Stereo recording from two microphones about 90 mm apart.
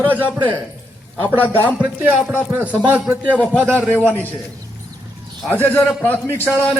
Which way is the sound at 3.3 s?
15° left (ahead or behind).